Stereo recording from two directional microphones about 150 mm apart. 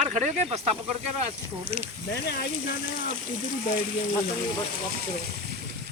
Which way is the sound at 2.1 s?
90° left.